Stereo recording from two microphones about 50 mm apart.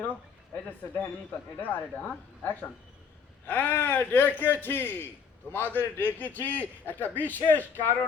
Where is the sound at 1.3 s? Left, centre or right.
Left.